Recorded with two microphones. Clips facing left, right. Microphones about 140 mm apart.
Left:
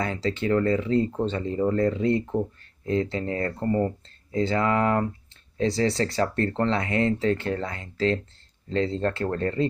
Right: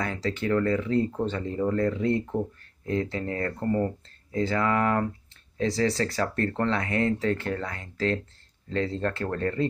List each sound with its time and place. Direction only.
0.0 s speech: 25° left (ahead or behind)